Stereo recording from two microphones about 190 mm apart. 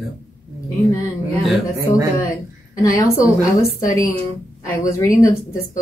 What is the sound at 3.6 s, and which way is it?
Speech, 15° left (ahead or behind).